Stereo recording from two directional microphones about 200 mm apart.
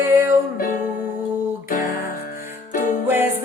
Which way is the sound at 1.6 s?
45° left (ahead or behind).